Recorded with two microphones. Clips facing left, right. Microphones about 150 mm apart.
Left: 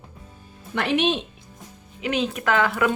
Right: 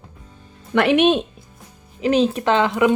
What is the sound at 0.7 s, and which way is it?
Speech, 65° right (ahead or behind).